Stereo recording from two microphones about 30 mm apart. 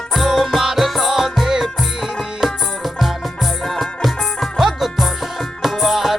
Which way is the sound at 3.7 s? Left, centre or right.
Centre.